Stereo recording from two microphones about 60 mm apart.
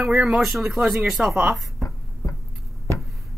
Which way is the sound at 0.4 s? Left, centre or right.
Centre.